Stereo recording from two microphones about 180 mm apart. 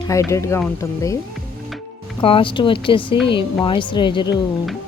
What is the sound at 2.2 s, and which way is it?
A woman's voice, 30° left (ahead or behind).